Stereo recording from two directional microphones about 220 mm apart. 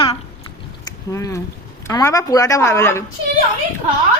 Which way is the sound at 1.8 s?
15° left (ahead or behind).